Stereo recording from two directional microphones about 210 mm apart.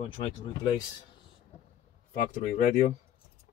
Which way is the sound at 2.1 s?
35° left (ahead or behind).